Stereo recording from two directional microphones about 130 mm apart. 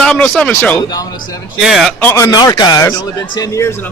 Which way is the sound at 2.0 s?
20° left (ahead or behind).